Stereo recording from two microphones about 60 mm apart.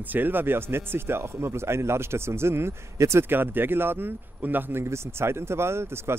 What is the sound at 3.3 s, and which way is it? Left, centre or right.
Speech, right.